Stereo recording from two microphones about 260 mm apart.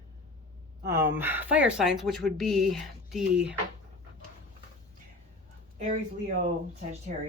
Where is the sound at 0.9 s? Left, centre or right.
Centre.